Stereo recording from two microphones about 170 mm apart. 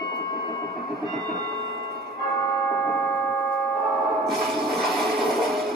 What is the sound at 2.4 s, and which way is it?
Tick-tock, 20° left (ahead or behind).